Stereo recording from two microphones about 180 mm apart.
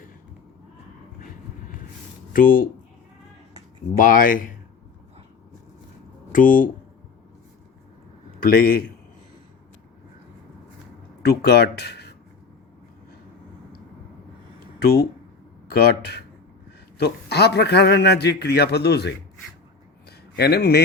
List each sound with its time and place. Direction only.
2.3 s speech: 50° left (ahead or behind)
3.9 s speech: 50° left (ahead or behind)
6.3 s speech: 50° left (ahead or behind)
8.4 s a man's voice: 55° left (ahead or behind)
11.2 s speech: 65° left (ahead or behind)
15.6 s a man's voice: 65° left (ahead or behind)
20.1 s a sound: 65° left (ahead or behind)